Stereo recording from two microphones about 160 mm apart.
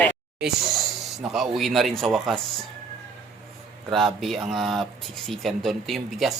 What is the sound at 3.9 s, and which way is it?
Speech, centre (ahead or behind).